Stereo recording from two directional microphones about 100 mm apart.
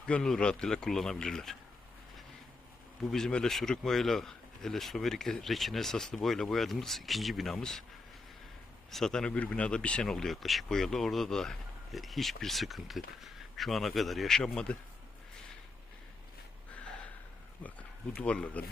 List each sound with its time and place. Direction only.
0.0 s speech: 5° left (ahead or behind)
3.1 s speech: 5° left (ahead or behind)
8.9 s speech: 5° left (ahead or behind)
17.6 s speech: 15° left (ahead or behind)